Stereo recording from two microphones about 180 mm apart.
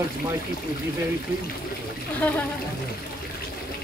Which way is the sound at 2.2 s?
10° left (ahead or behind).